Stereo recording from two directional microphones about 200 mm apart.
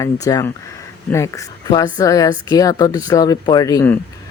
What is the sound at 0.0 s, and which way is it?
Speech, 15° left (ahead or behind).